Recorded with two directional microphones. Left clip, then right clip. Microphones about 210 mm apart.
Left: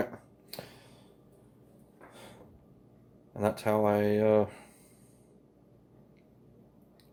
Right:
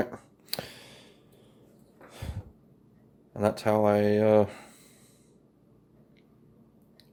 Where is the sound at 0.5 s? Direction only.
35° right (ahead or behind).